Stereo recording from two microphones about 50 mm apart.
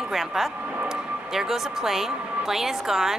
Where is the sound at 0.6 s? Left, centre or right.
Right.